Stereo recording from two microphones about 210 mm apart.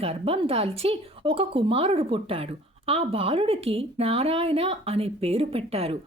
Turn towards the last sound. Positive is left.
turn(degrees=-30)  # may be behind; listen again after turning